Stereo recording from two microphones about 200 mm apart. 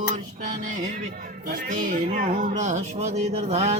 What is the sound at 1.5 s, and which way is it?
Music, 40° right (ahead or behind).